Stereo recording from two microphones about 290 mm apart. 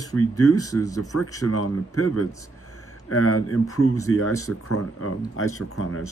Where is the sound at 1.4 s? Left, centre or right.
Left.